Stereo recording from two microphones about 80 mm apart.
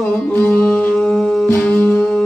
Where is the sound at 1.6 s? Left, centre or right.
Centre.